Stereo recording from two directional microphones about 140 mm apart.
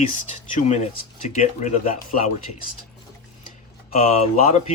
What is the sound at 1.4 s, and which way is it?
Speech, 60° left (ahead or behind).